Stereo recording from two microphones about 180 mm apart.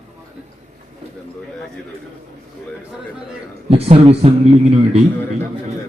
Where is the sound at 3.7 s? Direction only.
35° right (ahead or behind).